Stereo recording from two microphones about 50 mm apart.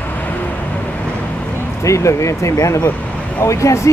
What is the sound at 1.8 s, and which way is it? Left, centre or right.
Speech, left.